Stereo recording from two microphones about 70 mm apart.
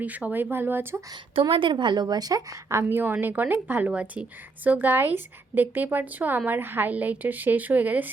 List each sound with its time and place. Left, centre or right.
0.0 s a woman's voice: right
0.5 s speech: right
1.7 s speech: right
2.6 s a woman's voice: right
3.0 s a woman's voice: right